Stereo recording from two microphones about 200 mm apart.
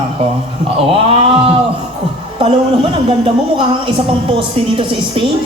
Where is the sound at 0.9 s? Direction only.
30° right (ahead or behind).